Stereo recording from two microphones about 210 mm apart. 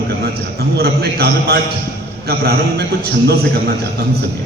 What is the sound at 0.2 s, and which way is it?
Music, 50° right (ahead or behind).